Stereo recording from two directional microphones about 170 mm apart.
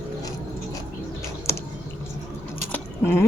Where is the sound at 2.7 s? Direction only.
15° left (ahead or behind).